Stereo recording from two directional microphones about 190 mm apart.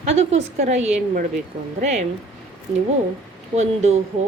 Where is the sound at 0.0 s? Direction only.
35° right (ahead or behind).